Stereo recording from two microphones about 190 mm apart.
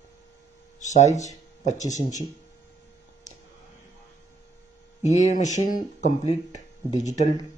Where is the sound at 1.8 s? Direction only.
20° left (ahead or behind).